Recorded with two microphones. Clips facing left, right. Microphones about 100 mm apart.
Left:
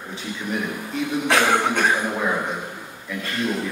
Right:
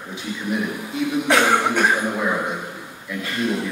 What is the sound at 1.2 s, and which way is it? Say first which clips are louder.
Speech: right 1 dB; 15° right (ahead or behind).